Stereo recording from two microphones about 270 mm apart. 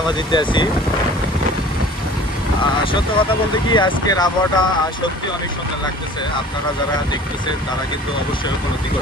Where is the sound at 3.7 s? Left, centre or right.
Centre.